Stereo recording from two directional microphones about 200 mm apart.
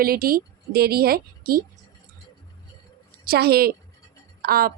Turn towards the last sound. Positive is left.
turn(degrees=-50)  # may be behind; listen again after turning